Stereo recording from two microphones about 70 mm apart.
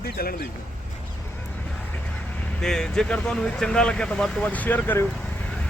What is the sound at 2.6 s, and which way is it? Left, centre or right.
Speech, centre.